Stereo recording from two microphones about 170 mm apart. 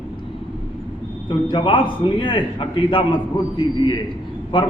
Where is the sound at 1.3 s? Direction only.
30° left (ahead or behind).